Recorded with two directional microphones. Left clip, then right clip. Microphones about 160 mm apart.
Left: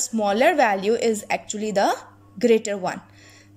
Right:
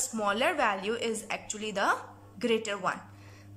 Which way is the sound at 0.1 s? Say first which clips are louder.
Left 10 dB; 25° left (ahead or behind).